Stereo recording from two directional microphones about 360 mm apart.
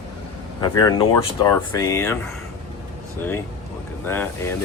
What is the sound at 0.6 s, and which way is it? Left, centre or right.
Speech, centre.